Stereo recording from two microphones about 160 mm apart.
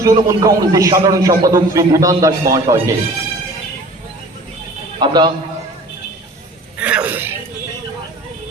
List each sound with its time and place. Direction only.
0.0 s a man's voice: 20° right (ahead or behind)
4.9 s a man's voice: 25° right (ahead or behind)
6.7 s a sound: 10° right (ahead or behind)